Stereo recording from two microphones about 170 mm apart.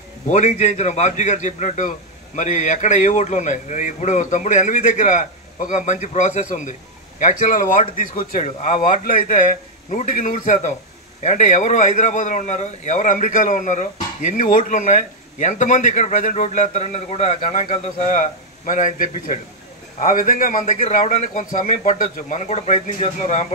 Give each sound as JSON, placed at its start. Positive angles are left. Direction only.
{"t": 0.3, "sound": "a man's voice", "side_deg": 45}